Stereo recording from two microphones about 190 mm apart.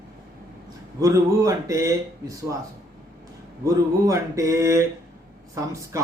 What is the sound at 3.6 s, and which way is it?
A man's voice, 15° right (ahead or behind).